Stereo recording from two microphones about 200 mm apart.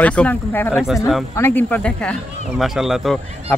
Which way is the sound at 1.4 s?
10° left (ahead or behind).